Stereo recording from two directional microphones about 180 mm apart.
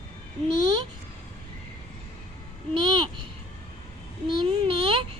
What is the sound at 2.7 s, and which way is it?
Babbling, 25° right (ahead or behind).